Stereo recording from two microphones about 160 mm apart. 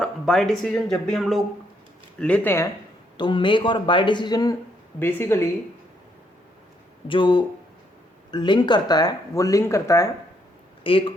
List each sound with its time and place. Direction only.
0.0 s speech: centre (ahead or behind)
3.2 s speech: 30° left (ahead or behind)
4.9 s speech: 15° left (ahead or behind)
7.1 s speech: 30° left (ahead or behind)
10.8 s speech: 35° left (ahead or behind)